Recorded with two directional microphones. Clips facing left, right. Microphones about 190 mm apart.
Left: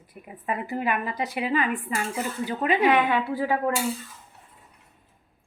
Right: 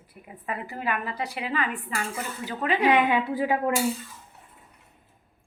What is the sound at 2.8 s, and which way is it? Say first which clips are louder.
Speech: right 2 dB; 15° right (ahead or behind).